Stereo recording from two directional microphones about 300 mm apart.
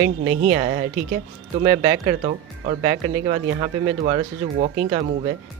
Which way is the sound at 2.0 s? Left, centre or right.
Right.